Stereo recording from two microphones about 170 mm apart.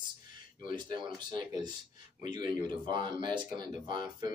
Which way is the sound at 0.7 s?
30° right (ahead or behind).